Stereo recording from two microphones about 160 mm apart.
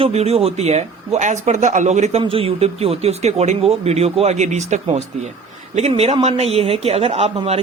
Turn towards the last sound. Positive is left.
turn(degrees=-40)  # may be behind; listen again after turning